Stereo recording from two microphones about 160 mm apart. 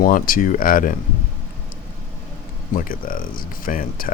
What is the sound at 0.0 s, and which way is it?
Speech, 60° left (ahead or behind).